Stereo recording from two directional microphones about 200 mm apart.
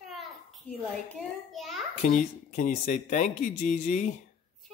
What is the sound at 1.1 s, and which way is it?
Speech, 5° left (ahead or behind).